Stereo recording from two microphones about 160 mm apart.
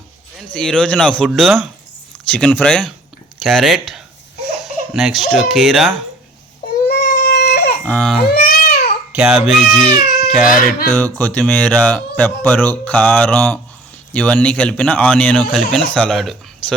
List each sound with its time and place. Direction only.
0.3 s speech: 5° left (ahead or behind)
6.8 s baby cry: 75° left (ahead or behind)
7.9 s speech: 10° left (ahead or behind)
8.3 s baby cry: 70° left (ahead or behind)
9.1 s speech: 5° right (ahead or behind)
10.4 s speech: 60° left (ahead or behind)
10.9 s speech: 10° left (ahead or behind)